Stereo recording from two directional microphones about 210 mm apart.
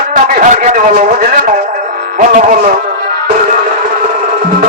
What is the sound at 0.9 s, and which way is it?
A man's voice, 45° right (ahead or behind).